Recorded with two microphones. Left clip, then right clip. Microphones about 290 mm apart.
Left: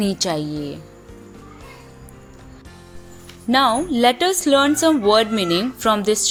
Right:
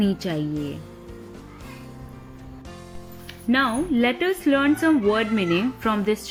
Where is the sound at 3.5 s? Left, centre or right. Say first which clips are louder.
Left 5 dB; centre.